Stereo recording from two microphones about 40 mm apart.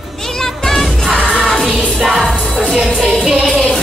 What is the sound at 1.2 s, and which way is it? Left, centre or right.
Music, right.